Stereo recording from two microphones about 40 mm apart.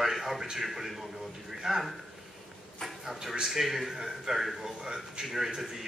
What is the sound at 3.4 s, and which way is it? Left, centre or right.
A man's voice, centre.